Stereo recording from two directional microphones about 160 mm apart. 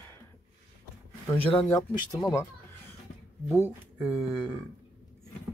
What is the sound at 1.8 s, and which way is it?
Speech, 20° left (ahead or behind).